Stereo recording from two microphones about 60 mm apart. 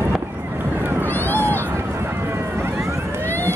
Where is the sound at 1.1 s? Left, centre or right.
Left.